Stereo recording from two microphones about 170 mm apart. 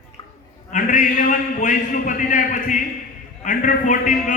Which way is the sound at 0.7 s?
50° left (ahead or behind).